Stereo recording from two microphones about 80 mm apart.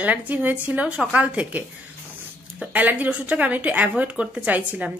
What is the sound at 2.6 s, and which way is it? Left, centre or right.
A woman's voice, right.